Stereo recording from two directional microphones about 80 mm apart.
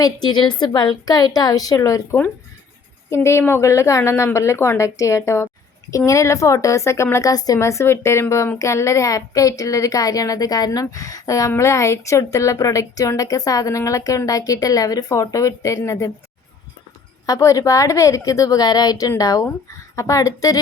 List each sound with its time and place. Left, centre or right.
0.0 s a woman's voice: left
3.1 s speech: left
7.6 s a child's voice: left
17.2 s a child's voice: left